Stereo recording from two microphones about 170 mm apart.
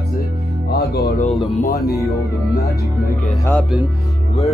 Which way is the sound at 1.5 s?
60° left (ahead or behind).